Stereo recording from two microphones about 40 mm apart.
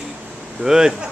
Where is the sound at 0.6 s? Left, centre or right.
Centre.